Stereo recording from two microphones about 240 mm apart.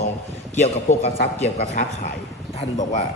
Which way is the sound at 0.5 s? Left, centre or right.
Left.